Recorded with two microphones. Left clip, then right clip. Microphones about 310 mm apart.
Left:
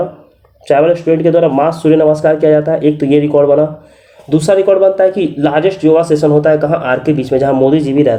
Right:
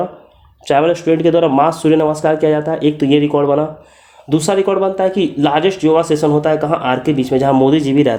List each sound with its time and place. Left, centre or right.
0.6 s speech: right
1.2 s speech: right
1.5 s speech: right